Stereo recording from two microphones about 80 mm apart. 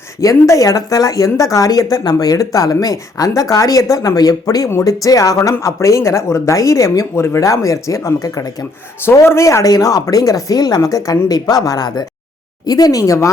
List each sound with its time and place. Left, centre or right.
0.2 s speech: left